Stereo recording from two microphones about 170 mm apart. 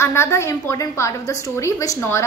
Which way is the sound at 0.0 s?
15° left (ahead or behind).